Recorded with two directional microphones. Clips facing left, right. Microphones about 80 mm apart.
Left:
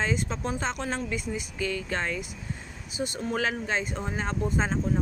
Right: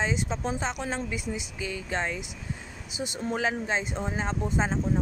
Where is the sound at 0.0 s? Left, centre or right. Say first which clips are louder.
Even; centre.